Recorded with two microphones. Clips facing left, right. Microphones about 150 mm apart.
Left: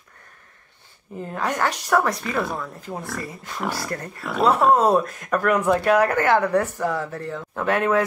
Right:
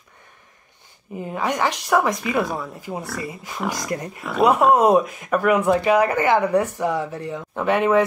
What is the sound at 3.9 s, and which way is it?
Speech, 15° right (ahead or behind).